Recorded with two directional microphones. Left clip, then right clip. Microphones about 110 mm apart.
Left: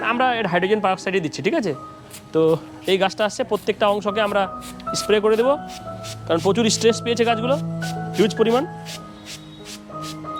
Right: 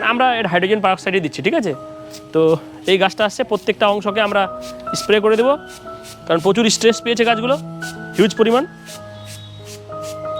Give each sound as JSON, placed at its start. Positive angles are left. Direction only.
{"t": 0.0, "sound": "speech", "side_deg": -40}
{"t": 7.8, "sound": "music", "side_deg": 15}
{"t": 8.2, "sound": "speech", "side_deg": -40}